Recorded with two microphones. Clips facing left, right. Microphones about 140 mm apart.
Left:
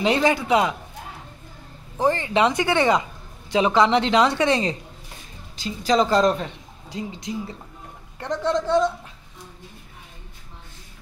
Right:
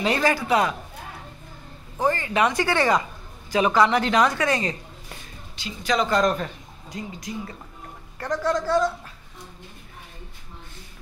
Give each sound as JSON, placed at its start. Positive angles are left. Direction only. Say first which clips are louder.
{"t": 0.0, "sound": "speech", "louder": "left 2 dB", "side_deg": 20}
{"t": 2.0, "sound": "speech", "louder": "left 2 dB", "side_deg": 25}